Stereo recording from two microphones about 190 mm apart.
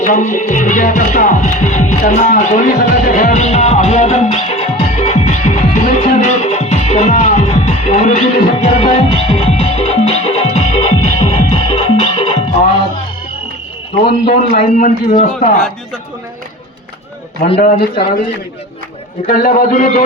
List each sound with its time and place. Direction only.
0.0 s music: 40° left (ahead or behind)
14.0 s a man's voice: 35° left (ahead or behind)
17.6 s a man's voice: 45° left (ahead or behind)
19.3 s a man's voice: 50° left (ahead or behind)